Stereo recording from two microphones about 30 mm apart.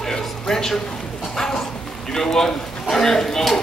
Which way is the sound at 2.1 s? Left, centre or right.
Centre.